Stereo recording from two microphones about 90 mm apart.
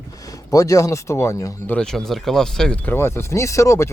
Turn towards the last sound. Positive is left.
turn(degrees=35)  # may be behind; listen again after turning